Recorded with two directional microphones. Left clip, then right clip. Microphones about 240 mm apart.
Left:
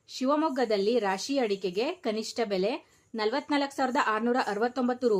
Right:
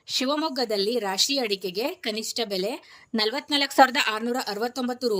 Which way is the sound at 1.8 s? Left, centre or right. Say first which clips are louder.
Right 2 dB; right.